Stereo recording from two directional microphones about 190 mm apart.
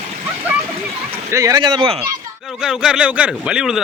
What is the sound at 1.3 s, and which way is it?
Speech, 15° right (ahead or behind).